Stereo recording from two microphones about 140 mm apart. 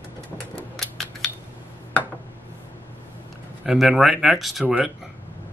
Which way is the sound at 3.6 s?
5° right (ahead or behind).